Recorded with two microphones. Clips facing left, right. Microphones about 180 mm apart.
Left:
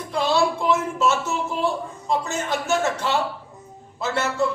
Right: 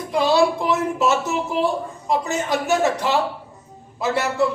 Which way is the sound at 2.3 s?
15° right (ahead or behind).